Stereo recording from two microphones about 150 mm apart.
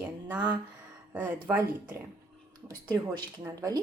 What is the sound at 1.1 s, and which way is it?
Speech, 10° right (ahead or behind).